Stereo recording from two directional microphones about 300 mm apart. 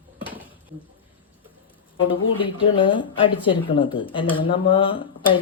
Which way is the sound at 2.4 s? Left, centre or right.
Centre.